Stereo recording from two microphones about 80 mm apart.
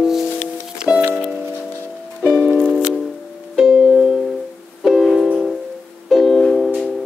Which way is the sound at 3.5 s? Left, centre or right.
Centre.